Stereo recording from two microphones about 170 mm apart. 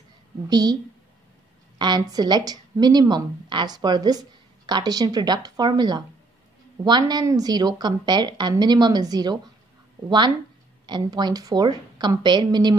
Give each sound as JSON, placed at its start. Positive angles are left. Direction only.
{"t": 0.5, "sound": "a woman's voice", "side_deg": -25}
{"t": 1.8, "sound": "a woman's voice", "side_deg": -25}